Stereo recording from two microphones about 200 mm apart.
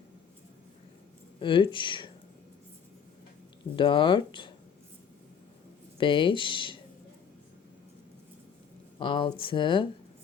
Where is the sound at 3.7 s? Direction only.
25° left (ahead or behind).